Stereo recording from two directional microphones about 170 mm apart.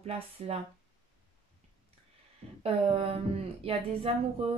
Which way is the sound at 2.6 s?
35° right (ahead or behind).